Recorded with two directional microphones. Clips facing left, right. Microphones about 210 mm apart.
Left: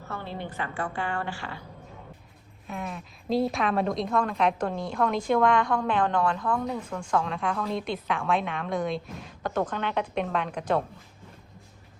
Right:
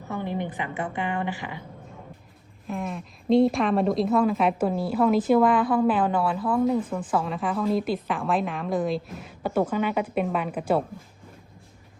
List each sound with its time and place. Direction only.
0.1 s a woman's voice: 15° right (ahead or behind)
2.6 s a woman's voice: centre (ahead or behind)